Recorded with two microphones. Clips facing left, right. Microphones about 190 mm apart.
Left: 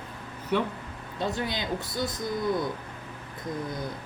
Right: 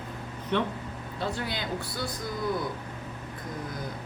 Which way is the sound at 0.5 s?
10° left (ahead or behind).